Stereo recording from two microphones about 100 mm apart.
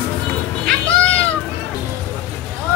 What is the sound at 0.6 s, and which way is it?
Music, 10° left (ahead or behind).